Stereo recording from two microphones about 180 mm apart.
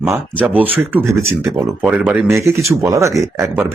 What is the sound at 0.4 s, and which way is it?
Speech, 10° right (ahead or behind).